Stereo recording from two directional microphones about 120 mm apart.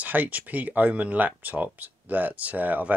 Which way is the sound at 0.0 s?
15° right (ahead or behind).